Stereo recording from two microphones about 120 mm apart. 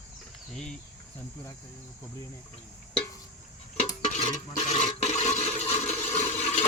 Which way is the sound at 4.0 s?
80° left.